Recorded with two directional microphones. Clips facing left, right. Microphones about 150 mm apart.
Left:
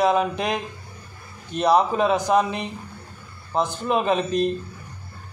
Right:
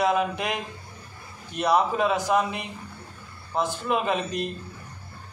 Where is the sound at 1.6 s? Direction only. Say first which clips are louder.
Left 3 dB; 25° left (ahead or behind).